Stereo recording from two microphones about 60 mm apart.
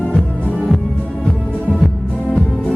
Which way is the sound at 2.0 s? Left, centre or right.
Centre.